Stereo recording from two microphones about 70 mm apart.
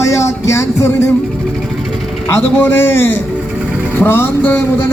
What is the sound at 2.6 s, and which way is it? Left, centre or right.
A man's voice, left.